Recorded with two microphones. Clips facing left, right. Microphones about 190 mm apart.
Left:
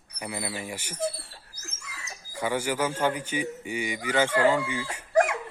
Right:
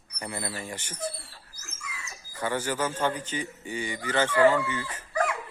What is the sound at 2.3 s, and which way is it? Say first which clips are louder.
A man's voice: left 2 dB; 10° left (ahead or behind).